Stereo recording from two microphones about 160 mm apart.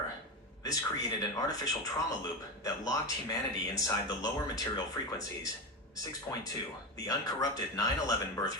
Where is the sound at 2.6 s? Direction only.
20° left (ahead or behind).